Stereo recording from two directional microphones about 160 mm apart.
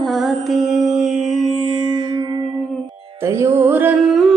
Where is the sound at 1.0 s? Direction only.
45° right (ahead or behind).